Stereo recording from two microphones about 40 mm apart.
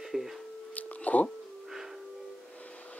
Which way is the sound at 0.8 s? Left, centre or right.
Left.